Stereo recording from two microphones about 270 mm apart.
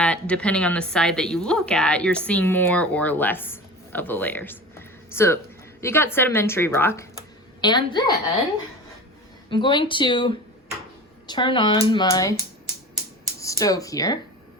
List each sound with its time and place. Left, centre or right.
0.0 s a woman's voice: centre
9.5 s a woman's voice: centre
13.4 s speech: centre